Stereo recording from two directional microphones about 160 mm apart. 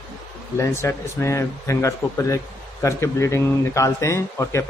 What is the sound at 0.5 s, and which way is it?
Speech, 15° left (ahead or behind).